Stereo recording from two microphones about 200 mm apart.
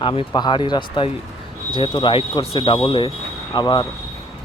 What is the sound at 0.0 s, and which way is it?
Speech, 25° left (ahead or behind).